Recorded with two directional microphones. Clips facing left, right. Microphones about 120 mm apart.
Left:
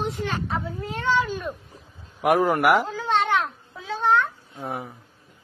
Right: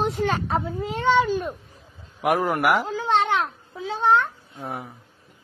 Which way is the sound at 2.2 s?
Centre (ahead or behind).